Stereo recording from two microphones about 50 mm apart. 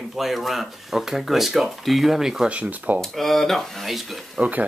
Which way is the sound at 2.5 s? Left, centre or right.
Right.